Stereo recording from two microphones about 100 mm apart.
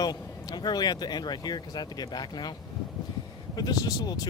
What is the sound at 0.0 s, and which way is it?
Speech, 45° left (ahead or behind).